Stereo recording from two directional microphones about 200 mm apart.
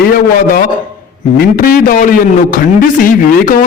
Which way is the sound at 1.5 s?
45° left (ahead or behind).